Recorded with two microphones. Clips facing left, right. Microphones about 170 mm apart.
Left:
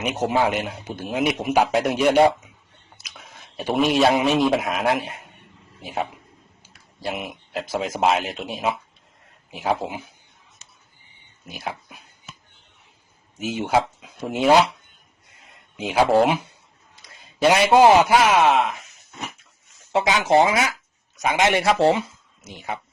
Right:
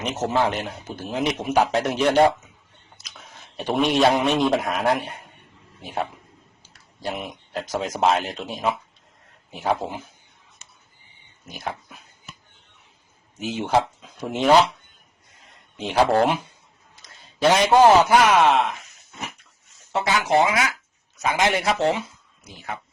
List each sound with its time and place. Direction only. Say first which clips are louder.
0.0 s a man's voice: left 1 dB; 10° left (ahead or behind)
7.1 s speech: left 1 dB; 10° left (ahead or behind)
11.5 s a man's voice: even; 10° left (ahead or behind)
13.4 s a man's voice: even; 10° left (ahead or behind)
15.8 s a man's voice: left 1 dB; 10° left (ahead or behind)
19.9 s speech: left 3 dB; 15° left (ahead or behind)
21.6 s speech: left 4 dB; 30° left (ahead or behind)
22.4 s a man's voice: left 3 dB; 15° left (ahead or behind)